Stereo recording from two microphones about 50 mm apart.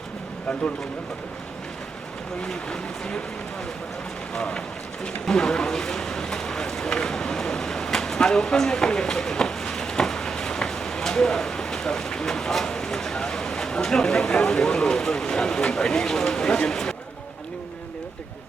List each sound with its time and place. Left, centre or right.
2.4 s speech: centre
4.4 s speech: centre